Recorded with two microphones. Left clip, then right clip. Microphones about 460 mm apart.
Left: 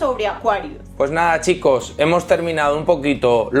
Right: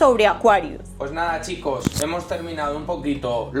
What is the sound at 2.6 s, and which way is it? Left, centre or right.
Speech, left.